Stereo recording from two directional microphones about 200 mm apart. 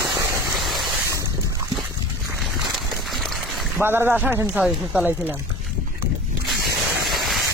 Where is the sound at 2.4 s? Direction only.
Centre (ahead or behind).